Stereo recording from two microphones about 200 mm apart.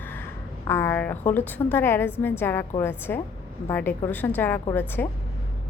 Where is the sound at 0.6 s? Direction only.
10° left (ahead or behind).